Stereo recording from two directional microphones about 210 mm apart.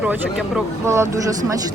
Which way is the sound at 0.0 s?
5° right (ahead or behind).